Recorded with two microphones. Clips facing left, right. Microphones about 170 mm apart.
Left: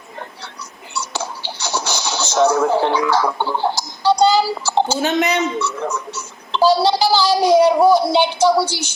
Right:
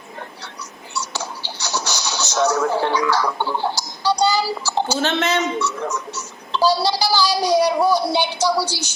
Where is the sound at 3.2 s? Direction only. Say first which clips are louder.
Left 3 dB; 15° left (ahead or behind).